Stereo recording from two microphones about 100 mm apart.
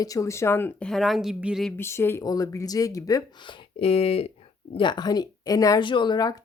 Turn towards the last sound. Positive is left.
turn(degrees=45)  # may be behind; listen again after turning